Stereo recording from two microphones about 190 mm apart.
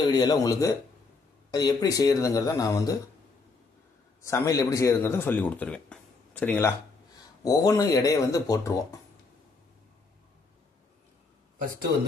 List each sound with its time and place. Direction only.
0.1 s speech: 20° left (ahead or behind)
4.2 s a man's voice: 15° left (ahead or behind)